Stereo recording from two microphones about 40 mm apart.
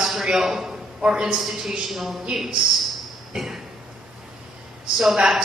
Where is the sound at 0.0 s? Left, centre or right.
Centre.